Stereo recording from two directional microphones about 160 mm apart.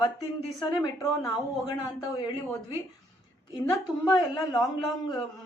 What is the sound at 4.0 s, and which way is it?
Speech, 25° left (ahead or behind).